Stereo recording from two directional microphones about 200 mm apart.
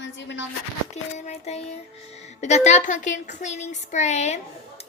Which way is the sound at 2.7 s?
40° left (ahead or behind).